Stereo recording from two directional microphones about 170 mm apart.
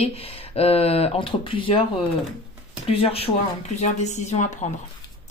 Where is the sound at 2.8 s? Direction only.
35° left (ahead or behind).